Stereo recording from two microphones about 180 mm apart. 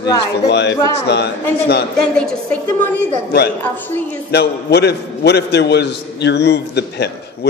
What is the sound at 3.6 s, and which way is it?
Speech, 10° left (ahead or behind).